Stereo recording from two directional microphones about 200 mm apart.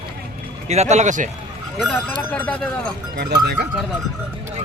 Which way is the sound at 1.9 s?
10° left (ahead or behind).